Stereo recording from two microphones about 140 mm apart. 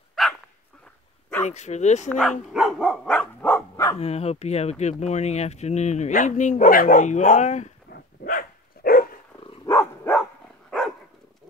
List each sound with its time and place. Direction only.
0.2 s dog: centre (ahead or behind)
1.4 s speech: 55° left (ahead or behind)
2.0 s speech: 5° left (ahead or behind)
2.4 s dog: centre (ahead or behind); by 3.9 s 15° left (ahead or behind)
4.0 s speech: 50° left (ahead or behind)
8.2 s dog: 90° left
9.7 s dog: 15° left (ahead or behind)